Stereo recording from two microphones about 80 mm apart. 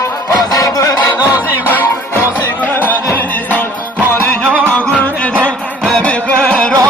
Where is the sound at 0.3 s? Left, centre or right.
Left.